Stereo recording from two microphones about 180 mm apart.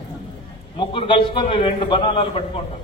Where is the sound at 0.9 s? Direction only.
30° left (ahead or behind).